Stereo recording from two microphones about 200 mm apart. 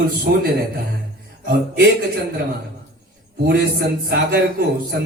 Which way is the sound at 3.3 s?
55° right (ahead or behind).